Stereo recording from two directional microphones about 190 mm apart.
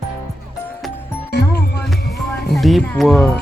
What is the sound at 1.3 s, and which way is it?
Music, 60° left (ahead or behind).